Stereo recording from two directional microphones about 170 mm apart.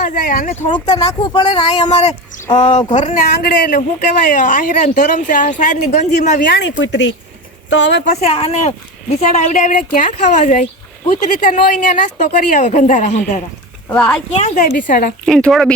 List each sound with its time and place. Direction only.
0.0 s speech: 55° left (ahead or behind)
0.7 s speech: 25° left (ahead or behind); by 3.1 s 40° left (ahead or behind)
3.2 s speech: 55° left (ahead or behind)
6.5 s speech: 90° left
8.0 s speech: 40° left (ahead or behind)
13.8 s speech: 10° left (ahead or behind)
14.3 s speech: 45° left (ahead or behind)
15.3 s speech: 5° left (ahead or behind)